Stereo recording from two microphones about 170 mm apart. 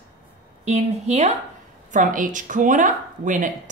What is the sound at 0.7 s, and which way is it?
Speech, 40° right (ahead or behind).